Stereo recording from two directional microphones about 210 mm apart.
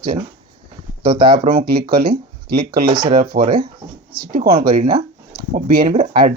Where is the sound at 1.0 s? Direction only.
25° right (ahead or behind).